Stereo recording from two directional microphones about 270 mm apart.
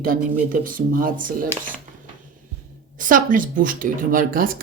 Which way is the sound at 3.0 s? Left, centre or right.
Right.